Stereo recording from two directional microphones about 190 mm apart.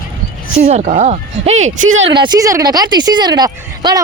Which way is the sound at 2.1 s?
20° right (ahead or behind).